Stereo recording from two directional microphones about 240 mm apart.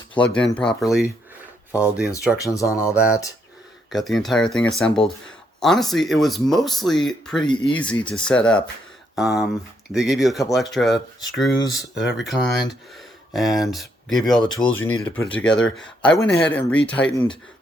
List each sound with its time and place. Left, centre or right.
0.1 s speech: centre
2.4 s speech: centre
3.8 s speech: centre
7.5 s speech: centre
7.8 s speech: centre